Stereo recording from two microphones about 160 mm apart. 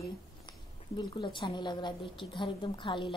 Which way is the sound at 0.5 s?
30° left (ahead or behind).